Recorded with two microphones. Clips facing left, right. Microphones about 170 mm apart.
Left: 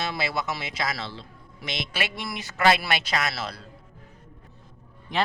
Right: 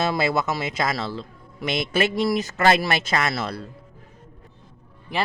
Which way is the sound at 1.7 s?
45° right (ahead or behind).